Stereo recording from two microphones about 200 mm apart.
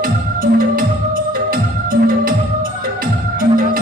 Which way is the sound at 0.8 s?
45° right (ahead or behind).